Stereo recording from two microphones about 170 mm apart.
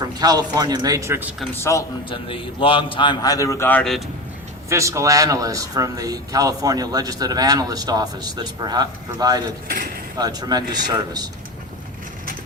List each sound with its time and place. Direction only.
0.2 s speech: 20° right (ahead or behind)
1.5 s a man's voice: 15° left (ahead or behind)
2.0 s a man's voice: 30° left (ahead or behind); by 4.0 s 5° left (ahead or behind)
4.7 s speech: 15° right (ahead or behind)
9.6 s speech: 55° right (ahead or behind)
10.2 s speech: 25° right (ahead or behind)